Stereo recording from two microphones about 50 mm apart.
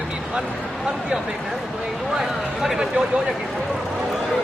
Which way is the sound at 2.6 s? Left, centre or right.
Centre.